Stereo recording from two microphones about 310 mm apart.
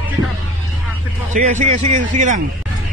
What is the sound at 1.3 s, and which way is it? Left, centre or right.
A man's voice, right.